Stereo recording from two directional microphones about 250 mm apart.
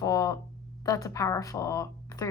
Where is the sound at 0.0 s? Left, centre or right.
Centre.